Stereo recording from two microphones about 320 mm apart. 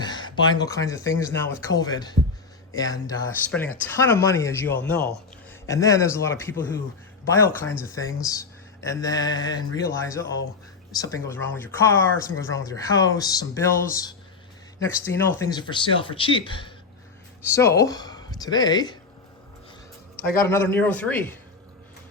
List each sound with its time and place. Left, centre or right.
0.0 s speech: centre
20.5 s speech: centre